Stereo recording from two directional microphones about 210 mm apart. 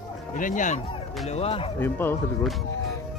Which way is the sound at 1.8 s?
10° left (ahead or behind).